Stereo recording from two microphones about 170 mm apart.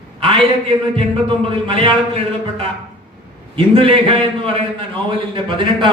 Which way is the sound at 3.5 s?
35° right (ahead or behind).